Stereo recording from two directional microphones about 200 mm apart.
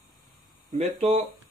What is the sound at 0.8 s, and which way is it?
Speech, 35° right (ahead or behind).